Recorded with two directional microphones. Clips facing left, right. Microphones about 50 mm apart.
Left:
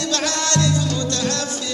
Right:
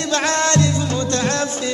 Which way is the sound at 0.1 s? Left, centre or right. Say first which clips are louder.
Right 6 dB; right.